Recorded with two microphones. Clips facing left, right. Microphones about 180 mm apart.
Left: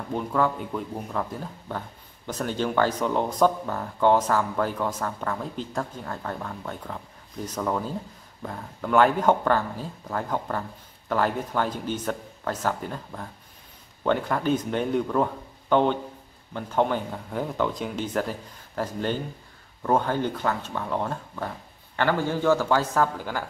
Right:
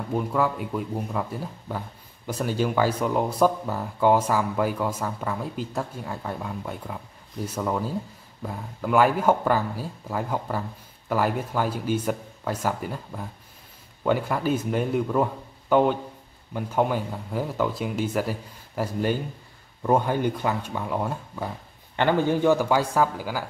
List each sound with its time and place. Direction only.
0.1 s speech: 5° right (ahead or behind)